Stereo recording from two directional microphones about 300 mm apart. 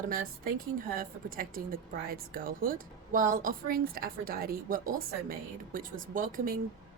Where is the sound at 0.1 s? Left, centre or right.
Right.